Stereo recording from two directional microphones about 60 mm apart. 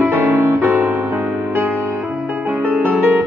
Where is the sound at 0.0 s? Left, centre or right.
Right.